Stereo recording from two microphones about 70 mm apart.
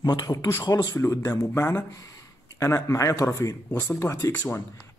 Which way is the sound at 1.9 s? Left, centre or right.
Left.